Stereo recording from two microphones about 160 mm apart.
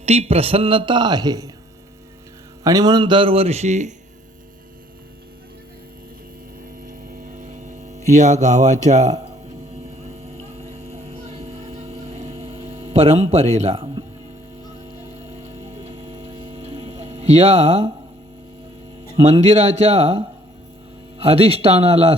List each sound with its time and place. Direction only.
0.0 s a man's voice: 40° right (ahead or behind); by 1.5 s 25° right (ahead or behind)
2.6 s a man's voice: 25° right (ahead or behind); by 3.9 s 45° right (ahead or behind)
6.8 s hum: 60° right (ahead or behind)
10.8 s a sound: 40° right (ahead or behind)
15.3 s a sound: 40° right (ahead or behind)
19.1 s a man's voice: 40° right (ahead or behind)